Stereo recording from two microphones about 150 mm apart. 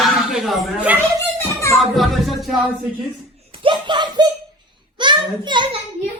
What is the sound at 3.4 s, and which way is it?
A child's voice, 35° right (ahead or behind).